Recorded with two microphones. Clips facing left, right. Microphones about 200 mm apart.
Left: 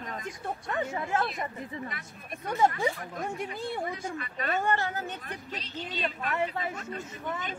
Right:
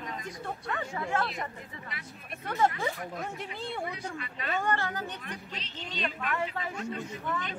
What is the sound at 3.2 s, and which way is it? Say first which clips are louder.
Speech: left 3 dB; 45° left (ahead or behind).